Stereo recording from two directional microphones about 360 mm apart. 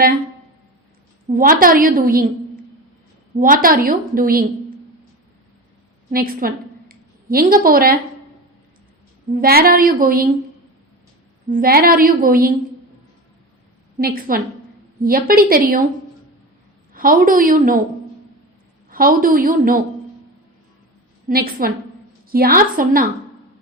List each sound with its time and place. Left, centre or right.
1.3 s a woman's voice: right
3.3 s a woman's voice: right
6.1 s a sound: right
7.6 s a woman's voice: right
9.3 s a woman's voice: right
11.5 s a woman's voice: right
14.0 s a woman's voice: right
16.9 s a woman's voice: right
18.9 s a woman's voice: right
21.2 s a woman's voice: right